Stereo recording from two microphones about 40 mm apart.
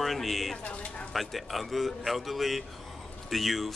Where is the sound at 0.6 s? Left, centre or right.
Left.